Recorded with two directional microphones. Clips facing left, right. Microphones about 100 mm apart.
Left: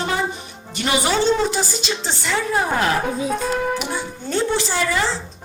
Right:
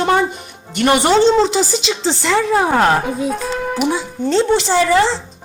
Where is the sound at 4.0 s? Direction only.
80° right.